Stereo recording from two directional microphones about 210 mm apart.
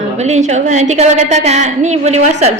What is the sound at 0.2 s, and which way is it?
A woman's voice, 35° right (ahead or behind).